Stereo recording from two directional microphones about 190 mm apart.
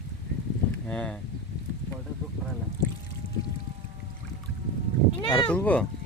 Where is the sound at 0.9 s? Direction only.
5° left (ahead or behind).